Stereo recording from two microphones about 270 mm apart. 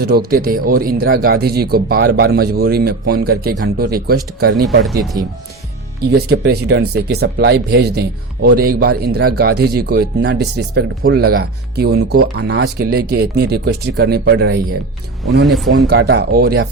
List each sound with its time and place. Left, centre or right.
0.0 s speech: right
6.0 s speech: right
15.4 s speech: centre
15.9 s speech: right